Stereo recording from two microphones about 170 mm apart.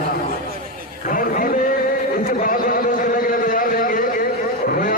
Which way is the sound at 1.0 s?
55° left (ahead or behind).